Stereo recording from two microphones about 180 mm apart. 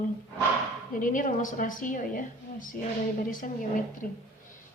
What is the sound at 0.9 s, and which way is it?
A woman's voice, 50° left (ahead or behind).